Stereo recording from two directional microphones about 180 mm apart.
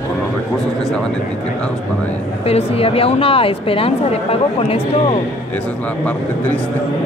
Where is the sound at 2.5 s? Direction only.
35° left (ahead or behind).